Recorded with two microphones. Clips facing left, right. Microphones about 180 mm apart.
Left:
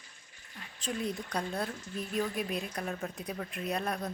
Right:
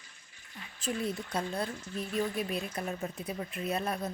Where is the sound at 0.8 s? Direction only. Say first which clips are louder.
Right 1 dB; 5° right (ahead or behind).